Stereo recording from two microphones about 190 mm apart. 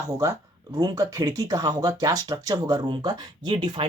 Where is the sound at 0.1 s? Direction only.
20° right (ahead or behind).